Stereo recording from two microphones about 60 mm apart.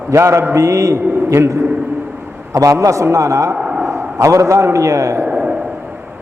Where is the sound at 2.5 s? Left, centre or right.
Right.